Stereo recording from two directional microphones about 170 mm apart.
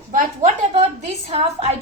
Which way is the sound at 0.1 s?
45° right (ahead or behind).